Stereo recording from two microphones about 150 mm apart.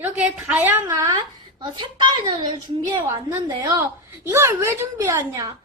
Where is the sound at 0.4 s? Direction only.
10° right (ahead or behind).